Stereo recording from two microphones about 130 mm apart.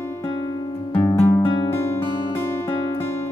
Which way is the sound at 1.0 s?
25° left (ahead or behind).